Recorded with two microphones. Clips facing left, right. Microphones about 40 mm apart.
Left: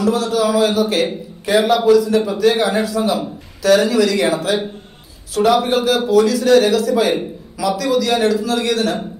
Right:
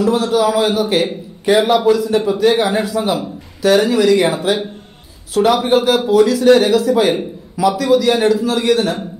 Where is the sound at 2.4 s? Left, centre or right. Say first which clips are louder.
Right 1 dB; right.